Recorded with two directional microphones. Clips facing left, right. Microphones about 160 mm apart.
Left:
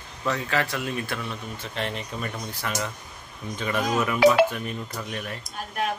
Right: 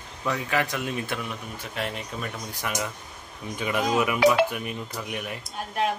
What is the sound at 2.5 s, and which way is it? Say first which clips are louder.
Speech: even; 15° right (ahead or behind).